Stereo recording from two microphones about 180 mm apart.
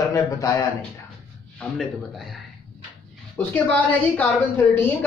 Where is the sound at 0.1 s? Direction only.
20° left (ahead or behind).